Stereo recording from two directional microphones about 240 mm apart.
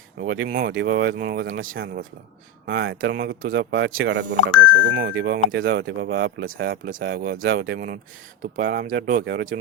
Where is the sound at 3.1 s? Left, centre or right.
Right.